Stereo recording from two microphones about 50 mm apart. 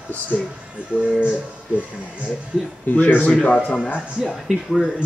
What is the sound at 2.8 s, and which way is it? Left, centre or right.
Speech, left.